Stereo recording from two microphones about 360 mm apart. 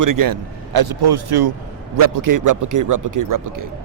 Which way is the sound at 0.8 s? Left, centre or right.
Right.